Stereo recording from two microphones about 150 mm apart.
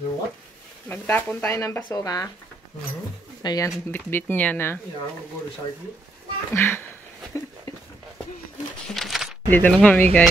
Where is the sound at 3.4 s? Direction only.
25° left (ahead or behind).